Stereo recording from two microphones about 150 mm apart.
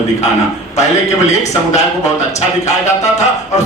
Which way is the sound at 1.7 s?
50° left (ahead or behind).